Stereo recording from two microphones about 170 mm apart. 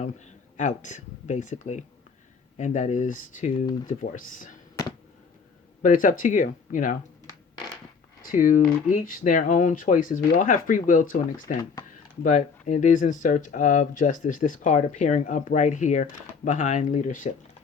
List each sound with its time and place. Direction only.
0.5 s speech: 45° left (ahead or behind)
5.8 s speech: 50° left (ahead or behind)
8.2 s speech: 50° left (ahead or behind)
12.2 s speech: 45° left (ahead or behind)